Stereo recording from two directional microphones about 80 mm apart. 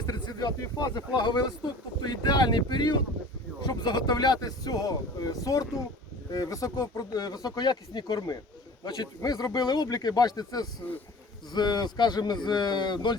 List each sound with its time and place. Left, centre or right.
0.0 s speech: left